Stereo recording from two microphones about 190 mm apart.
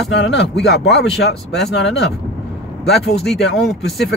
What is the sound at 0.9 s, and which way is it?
Speech, centre (ahead or behind).